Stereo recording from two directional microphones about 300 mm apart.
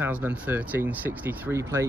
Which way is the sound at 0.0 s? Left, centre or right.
Centre.